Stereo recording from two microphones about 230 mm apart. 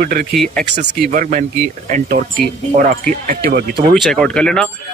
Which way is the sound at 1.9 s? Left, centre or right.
Right.